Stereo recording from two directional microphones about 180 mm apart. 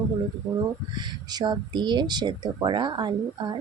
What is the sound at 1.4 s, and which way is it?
Speech, 25° right (ahead or behind).